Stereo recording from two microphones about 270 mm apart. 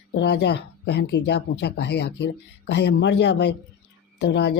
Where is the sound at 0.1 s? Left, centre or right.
Left.